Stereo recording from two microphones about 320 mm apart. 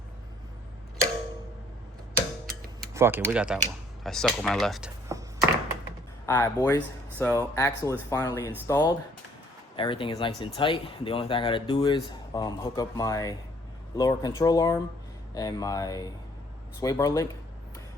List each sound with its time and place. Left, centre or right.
2.5 s tick-tock: right
2.9 s tick-tock: centre
3.2 s speech: centre
6.2 s speech: centre